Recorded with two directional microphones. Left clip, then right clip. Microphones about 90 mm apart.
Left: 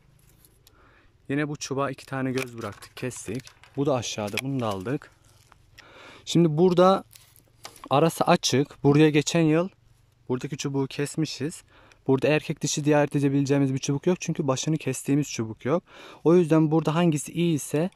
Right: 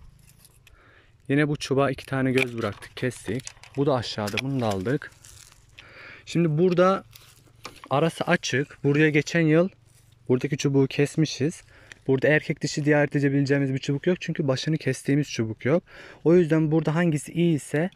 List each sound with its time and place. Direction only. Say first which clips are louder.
1.2 s speech: right 5 dB; centre (ahead or behind)
2.8 s speech: right 4 dB; 15° left (ahead or behind)
3.7 s speech: right 1 dB; 25° left (ahead or behind); by 5.1 s 10° left (ahead or behind)
5.9 s a sound: right 3 dB; 40° left (ahead or behind)
6.1 s speech: left 3 dB; 55° left (ahead or behind)
9.5 s speech: right 3 dB; 15° left (ahead or behind)
10.2 s speech: right 6 dB; 5° left (ahead or behind)
12.1 s speech: right 1 dB; 35° left (ahead or behind); by 16.0 s 20° left (ahead or behind)
16.0 s speech: left 1 dB; 35° left (ahead or behind)
16.8 s speech: left 1 dB; 30° left (ahead or behind)